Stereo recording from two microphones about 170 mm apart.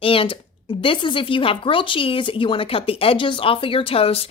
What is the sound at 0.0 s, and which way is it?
Speech, 30° left (ahead or behind).